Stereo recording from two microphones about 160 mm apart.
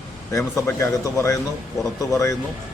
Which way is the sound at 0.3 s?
20° left (ahead or behind).